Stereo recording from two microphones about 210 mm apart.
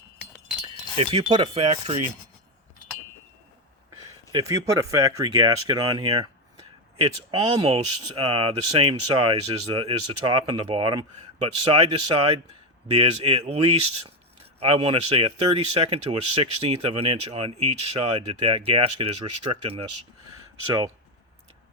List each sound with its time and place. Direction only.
0.6 s a sound: 25° right (ahead or behind)
4.3 s speech: 20° right (ahead or behind)
6.9 s speech: 30° right (ahead or behind)